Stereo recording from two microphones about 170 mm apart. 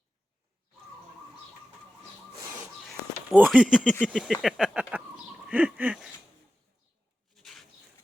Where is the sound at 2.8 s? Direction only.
5° right (ahead or behind).